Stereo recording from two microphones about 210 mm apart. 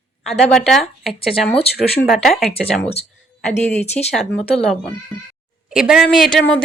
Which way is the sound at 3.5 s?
30° left (ahead or behind).